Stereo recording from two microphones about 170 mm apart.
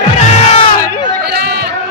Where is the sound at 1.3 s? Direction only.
70° right (ahead or behind).